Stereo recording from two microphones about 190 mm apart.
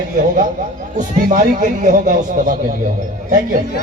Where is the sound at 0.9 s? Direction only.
45° right (ahead or behind).